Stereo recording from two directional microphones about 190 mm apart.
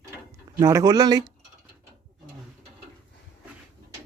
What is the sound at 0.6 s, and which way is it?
Speech, 20° right (ahead or behind).